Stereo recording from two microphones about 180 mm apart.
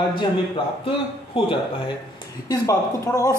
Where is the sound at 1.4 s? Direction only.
30° left (ahead or behind).